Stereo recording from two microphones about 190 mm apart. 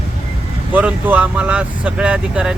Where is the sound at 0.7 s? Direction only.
10° right (ahead or behind).